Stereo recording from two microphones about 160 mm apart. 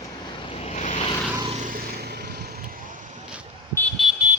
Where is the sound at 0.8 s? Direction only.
45° left (ahead or behind).